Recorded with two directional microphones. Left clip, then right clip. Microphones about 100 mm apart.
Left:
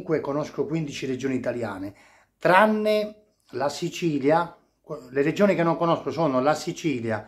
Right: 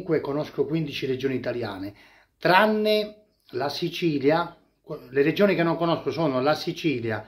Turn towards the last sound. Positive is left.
turn(degrees=-10)  # may be behind; listen again after turning